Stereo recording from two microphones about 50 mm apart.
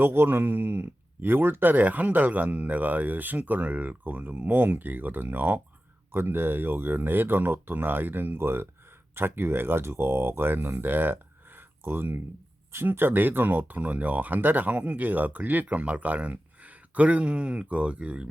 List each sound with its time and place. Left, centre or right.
0.0 s speech: right